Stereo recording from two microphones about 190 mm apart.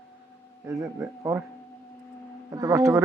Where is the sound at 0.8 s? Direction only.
15° right (ahead or behind).